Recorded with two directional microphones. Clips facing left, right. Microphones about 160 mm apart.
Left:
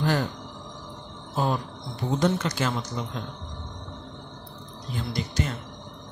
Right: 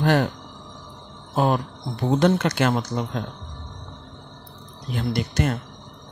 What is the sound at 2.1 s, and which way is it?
Speech, 65° right (ahead or behind).